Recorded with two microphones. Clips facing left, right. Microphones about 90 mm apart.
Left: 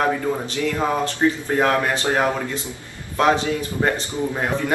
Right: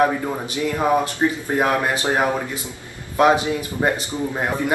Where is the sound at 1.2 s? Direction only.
20° right (ahead or behind).